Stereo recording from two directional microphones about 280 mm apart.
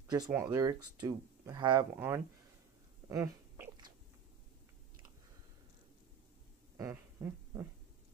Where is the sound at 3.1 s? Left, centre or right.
Centre.